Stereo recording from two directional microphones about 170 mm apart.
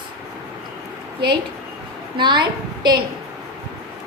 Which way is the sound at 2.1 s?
25° right (ahead or behind).